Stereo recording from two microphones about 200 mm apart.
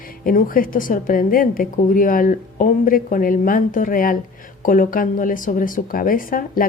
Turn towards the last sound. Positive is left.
turn(degrees=45)  # may be behind; listen again after turning